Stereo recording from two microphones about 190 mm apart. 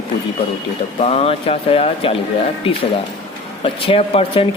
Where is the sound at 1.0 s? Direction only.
35° left (ahead or behind).